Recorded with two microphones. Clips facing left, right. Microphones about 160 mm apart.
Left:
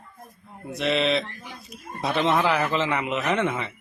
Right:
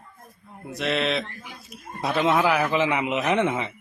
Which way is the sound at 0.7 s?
Centre (ahead or behind).